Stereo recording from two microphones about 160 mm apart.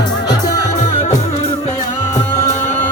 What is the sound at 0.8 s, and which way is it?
Music, 45° left (ahead or behind).